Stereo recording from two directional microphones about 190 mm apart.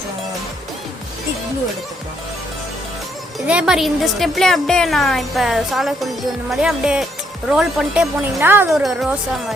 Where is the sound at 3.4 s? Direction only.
5° right (ahead or behind).